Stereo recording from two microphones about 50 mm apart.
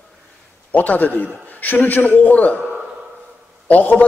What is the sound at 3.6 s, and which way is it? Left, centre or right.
Speech, left.